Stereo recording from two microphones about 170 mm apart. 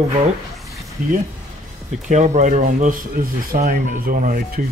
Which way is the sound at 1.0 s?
50° right (ahead or behind).